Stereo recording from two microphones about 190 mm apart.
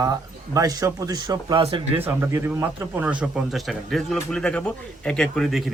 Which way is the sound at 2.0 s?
10° right (ahead or behind).